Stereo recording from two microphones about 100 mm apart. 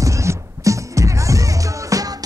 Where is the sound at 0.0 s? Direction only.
30° right (ahead or behind).